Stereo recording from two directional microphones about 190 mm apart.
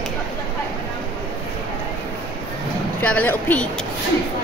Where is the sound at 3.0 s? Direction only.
10° left (ahead or behind).